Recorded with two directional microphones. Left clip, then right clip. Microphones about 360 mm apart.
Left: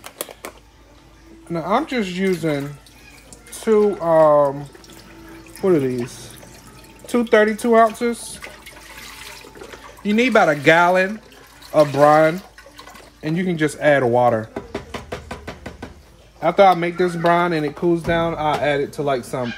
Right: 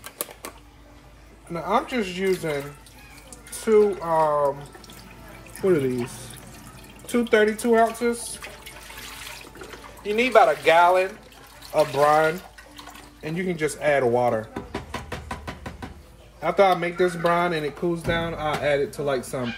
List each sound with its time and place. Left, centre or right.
0.0 s typewriter: centre
1.5 s speech: left
3.6 s speech: left
7.1 s speech: left
10.0 s speech: left
14.7 s knock: centre
16.3 s speech: left